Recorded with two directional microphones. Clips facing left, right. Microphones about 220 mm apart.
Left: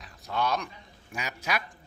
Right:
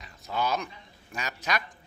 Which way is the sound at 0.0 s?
5° right (ahead or behind).